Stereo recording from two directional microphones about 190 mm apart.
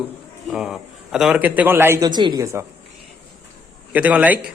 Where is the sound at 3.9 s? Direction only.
10° right (ahead or behind).